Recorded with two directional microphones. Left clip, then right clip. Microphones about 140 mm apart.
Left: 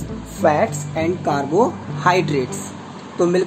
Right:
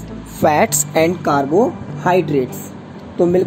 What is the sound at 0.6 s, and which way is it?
Speech, 90° right.